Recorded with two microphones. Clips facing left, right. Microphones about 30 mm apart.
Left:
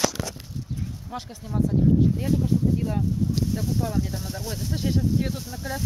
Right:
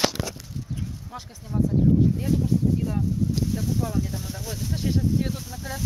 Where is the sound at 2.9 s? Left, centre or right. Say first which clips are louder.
Even; centre.